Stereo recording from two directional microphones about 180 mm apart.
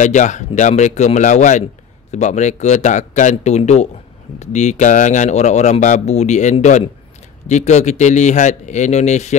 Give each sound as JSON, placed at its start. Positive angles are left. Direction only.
{"t": 0.0, "sound": "speech", "side_deg": 40}